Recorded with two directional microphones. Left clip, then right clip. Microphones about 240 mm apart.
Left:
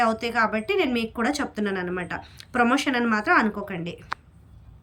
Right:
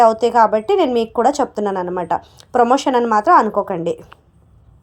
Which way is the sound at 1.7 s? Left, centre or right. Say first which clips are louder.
Right 9 dB; right.